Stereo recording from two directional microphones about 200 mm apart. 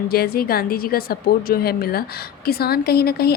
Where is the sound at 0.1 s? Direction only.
50° left (ahead or behind).